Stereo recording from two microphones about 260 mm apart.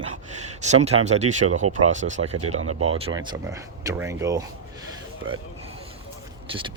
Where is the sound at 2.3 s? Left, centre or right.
Right.